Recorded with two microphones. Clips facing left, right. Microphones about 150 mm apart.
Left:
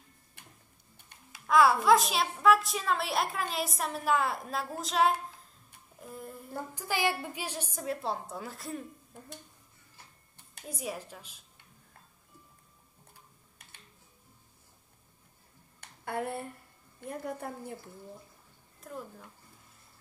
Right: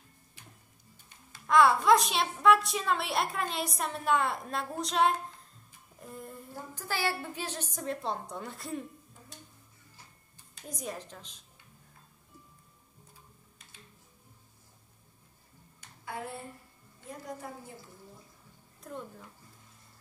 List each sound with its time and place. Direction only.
0.4 s tick-tock: 60° left (ahead or behind)
1.3 s a child's voice: centre (ahead or behind)
5.9 s a sound: centre (ahead or behind)
6.7 s a child's voice: 15° left (ahead or behind)
10.7 s a woman's voice: 5° left (ahead or behind)
15.8 s a sound: 60° left (ahead or behind)
17.0 s a woman's voice: 60° left (ahead or behind)
18.8 s a child's voice: centre (ahead or behind)